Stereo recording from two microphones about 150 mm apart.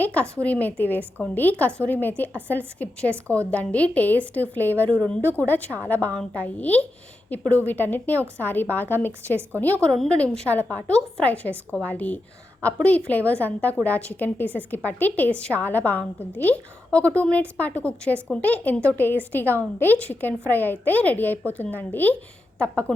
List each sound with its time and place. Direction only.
0.0 s a woman's voice: 10° left (ahead or behind)
3.2 s a woman's voice: 20° right (ahead or behind)
3.5 s a woman's voice: 10° left (ahead or behind)